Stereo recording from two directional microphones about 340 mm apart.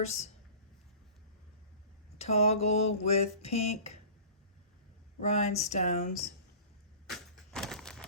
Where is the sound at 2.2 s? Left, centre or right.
Centre.